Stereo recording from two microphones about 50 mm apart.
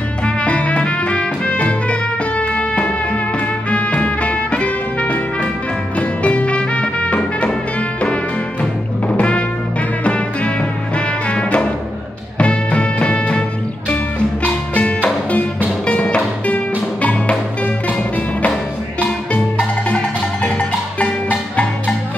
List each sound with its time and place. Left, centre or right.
0.2 s music: left
9.0 s music: left
14.4 s music: left
20.4 s music: left